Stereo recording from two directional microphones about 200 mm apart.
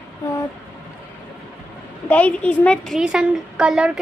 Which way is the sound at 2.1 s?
5° left (ahead or behind).